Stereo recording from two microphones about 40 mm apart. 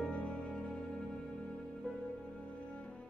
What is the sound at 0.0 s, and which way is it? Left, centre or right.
Music, left.